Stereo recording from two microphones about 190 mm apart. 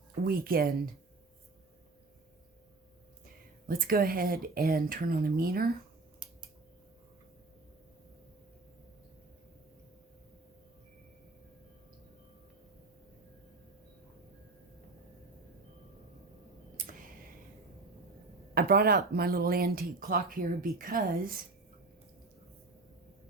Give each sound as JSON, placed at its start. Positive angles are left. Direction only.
{"t": 0.3, "sound": "speech", "side_deg": -50}
{"t": 3.7, "sound": "speech", "side_deg": -50}
{"t": 16.7, "sound": "a sound", "side_deg": -45}
{"t": 18.5, "sound": "speech", "side_deg": -55}